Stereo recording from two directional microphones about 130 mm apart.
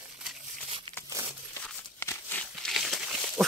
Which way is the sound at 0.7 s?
40° right (ahead or behind).